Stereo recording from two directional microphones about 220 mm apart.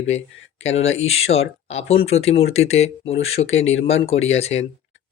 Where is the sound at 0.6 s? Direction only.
30° left (ahead or behind).